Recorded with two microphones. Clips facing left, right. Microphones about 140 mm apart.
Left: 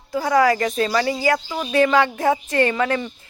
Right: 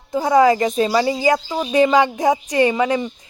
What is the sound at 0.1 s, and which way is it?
A woman's voice, 20° right (ahead or behind).